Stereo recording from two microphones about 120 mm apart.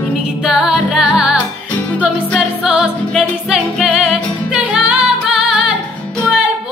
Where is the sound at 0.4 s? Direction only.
5° right (ahead or behind).